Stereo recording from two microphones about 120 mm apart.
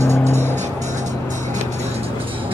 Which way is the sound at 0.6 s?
75° right (ahead or behind).